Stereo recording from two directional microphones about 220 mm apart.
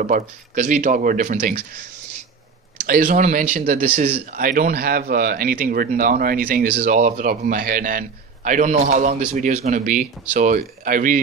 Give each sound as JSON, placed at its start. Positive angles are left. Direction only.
{"t": 0.0, "sound": "speech", "side_deg": -35}
{"t": 2.9, "sound": "speech", "side_deg": -35}